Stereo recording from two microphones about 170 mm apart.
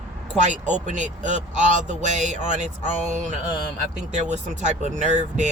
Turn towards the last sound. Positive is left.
turn(degrees=-45)  # may be behind; listen again after turning